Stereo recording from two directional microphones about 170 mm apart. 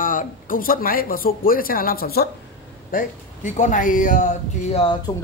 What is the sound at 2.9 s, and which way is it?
A man's voice, 50° left (ahead or behind).